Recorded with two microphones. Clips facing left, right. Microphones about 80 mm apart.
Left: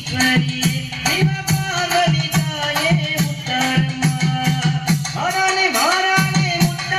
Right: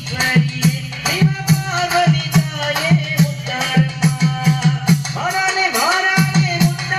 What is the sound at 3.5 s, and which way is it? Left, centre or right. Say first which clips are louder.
Music: right 1 dB; centre.